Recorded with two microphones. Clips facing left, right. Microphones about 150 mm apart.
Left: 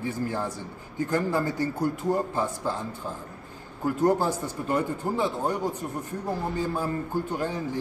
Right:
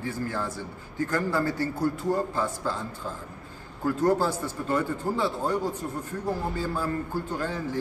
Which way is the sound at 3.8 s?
15° left (ahead or behind).